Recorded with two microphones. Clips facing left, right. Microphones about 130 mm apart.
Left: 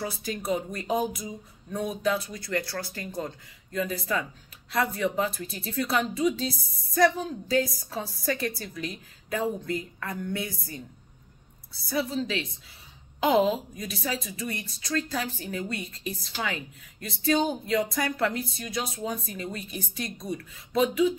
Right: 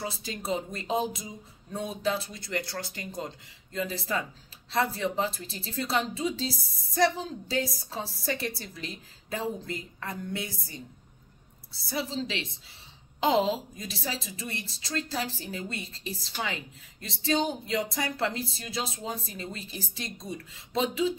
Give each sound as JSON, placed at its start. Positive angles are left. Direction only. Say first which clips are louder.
{"t": 0.0, "sound": "a woman's voice", "louder": "left 3 dB", "side_deg": -25}
{"t": 11.9, "sound": "a woman's voice", "louder": "left 4 dB", "side_deg": -25}